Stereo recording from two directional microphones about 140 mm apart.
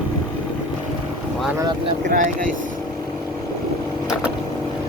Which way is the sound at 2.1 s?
75° right (ahead or behind).